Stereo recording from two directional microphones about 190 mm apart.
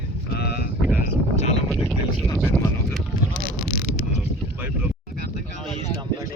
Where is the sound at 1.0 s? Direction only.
35° left (ahead or behind).